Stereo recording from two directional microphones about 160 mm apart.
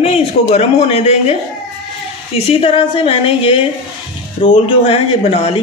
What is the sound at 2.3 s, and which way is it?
A woman's voice, 35° left (ahead or behind).